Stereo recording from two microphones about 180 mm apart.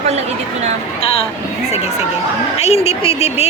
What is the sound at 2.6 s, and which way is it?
Speech, 35° left (ahead or behind).